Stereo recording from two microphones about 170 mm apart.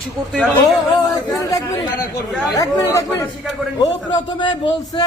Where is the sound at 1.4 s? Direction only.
20° left (ahead or behind).